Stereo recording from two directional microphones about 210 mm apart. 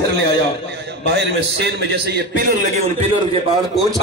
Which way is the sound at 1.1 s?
55° right (ahead or behind).